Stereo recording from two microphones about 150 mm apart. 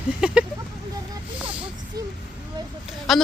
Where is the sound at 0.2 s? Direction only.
5° right (ahead or behind).